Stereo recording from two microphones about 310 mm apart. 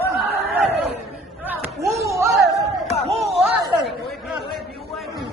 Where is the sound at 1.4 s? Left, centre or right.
Centre.